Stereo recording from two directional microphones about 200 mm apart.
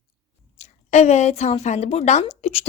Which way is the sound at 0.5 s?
35° left (ahead or behind).